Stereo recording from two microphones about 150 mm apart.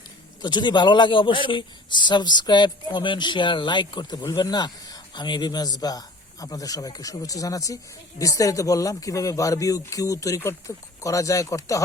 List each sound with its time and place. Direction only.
0.4 s a man's voice: 30° left (ahead or behind)